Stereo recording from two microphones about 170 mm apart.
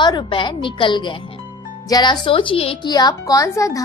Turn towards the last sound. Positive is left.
turn(degrees=20)  # may be behind; listen again after turning